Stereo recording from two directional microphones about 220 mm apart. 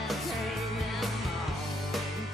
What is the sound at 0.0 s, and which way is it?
Music, centre (ahead or behind).